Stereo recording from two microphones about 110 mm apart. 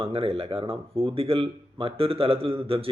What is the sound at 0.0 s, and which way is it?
Speech, 60° right (ahead or behind).